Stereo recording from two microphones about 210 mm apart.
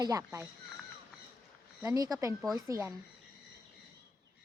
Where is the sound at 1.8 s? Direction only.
15° right (ahead or behind).